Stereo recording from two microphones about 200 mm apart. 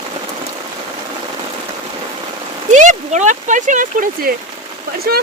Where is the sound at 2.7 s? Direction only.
40° right (ahead or behind).